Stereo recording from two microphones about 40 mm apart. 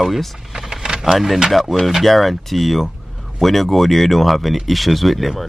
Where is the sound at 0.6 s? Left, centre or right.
Centre.